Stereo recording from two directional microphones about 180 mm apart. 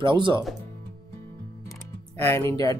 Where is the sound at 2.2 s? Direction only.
15° left (ahead or behind).